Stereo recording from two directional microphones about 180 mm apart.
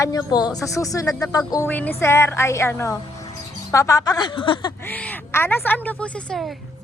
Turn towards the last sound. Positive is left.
turn(degrees=0)  # may be behind; listen again after turning